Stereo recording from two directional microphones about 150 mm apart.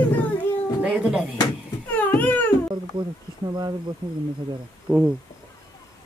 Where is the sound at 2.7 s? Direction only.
30° right (ahead or behind).